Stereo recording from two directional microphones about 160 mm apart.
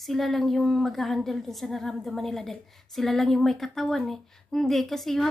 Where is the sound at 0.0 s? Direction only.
Centre (ahead or behind).